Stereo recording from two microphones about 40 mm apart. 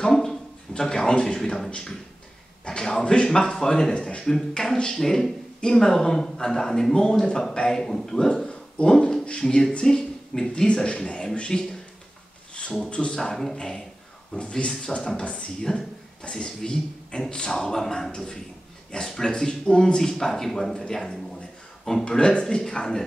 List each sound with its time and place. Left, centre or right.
0.1 s a sound: centre
2.6 s speech: centre
4.3 s speech: centre
8.5 s a sound: left
9.4 s speech: centre
12.6 s a sound: left
12.9 s speech: left
13.2 s a man's voice: centre
22.0 s speech: left